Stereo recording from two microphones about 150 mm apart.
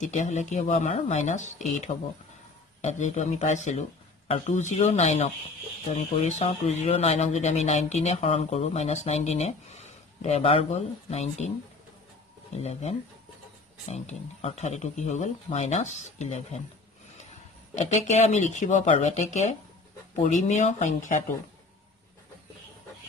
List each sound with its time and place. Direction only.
0.0 s speech: 55° left (ahead or behind)
1.9 s speech: 35° left (ahead or behind)
2.8 s speech: 50° left (ahead or behind)
12.5 s speech: 45° left (ahead or behind)
17.7 s speech: 50° left (ahead or behind)